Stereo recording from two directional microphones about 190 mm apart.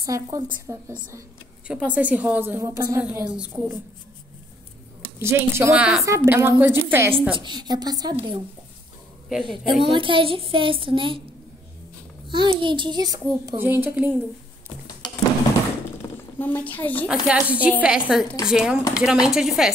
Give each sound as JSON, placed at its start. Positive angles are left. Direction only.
{"t": 0.0, "sound": "a woman's voice", "side_deg": -15}
{"t": 1.7, "sound": "a woman's voice", "side_deg": -5}
{"t": 5.2, "sound": "a woman's voice", "side_deg": -15}
{"t": 7.3, "sound": "a child's voice", "side_deg": -25}
{"t": 9.4, "sound": "a child's voice", "side_deg": -25}
{"t": 12.3, "sound": "a child's voice", "side_deg": -25}
{"t": 16.3, "sound": "a woman's voice", "side_deg": 10}
{"t": 17.1, "sound": "speech", "side_deg": -5}